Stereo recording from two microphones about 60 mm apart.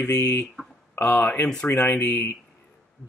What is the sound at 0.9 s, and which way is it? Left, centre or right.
Speech, left.